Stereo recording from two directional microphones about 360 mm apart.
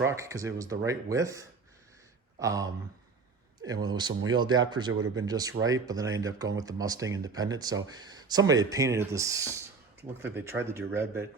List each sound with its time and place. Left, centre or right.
0.0 s speech: centre
4.9 s speech: right
5.1 s speech: centre